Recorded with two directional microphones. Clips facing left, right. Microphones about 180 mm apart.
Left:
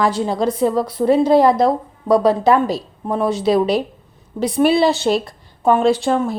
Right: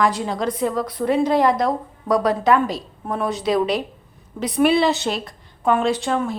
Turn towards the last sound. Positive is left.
turn(degrees=35)  # may be behind; listen again after turning